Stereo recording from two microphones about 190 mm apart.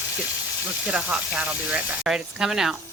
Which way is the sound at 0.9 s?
5° right (ahead or behind).